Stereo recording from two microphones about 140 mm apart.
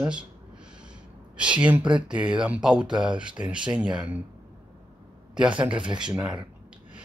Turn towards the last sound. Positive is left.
turn(degrees=-35)  # may be behind; listen again after turning